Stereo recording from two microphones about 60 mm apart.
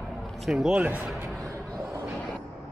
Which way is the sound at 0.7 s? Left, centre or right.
Right.